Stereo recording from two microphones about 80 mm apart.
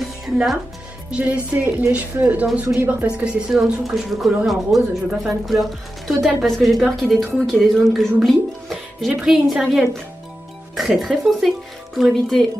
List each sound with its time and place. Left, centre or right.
0.0 s music: centre
1.1 s speech: centre
3.3 s speech: centre
11.0 s speech: centre